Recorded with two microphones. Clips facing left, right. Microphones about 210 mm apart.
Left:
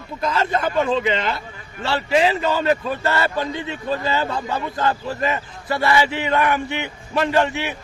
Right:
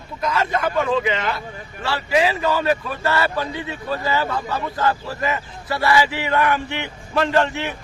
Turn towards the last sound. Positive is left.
turn(degrees=15)  # may be behind; listen again after turning